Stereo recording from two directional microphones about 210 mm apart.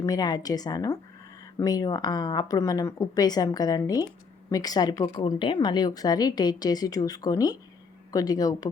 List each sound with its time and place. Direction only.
0.0 s a woman's voice: 20° left (ahead or behind)